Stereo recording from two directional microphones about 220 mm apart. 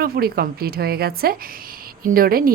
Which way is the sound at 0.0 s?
45° right (ahead or behind).